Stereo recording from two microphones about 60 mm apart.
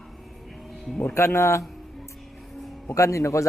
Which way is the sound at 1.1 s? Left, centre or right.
Left.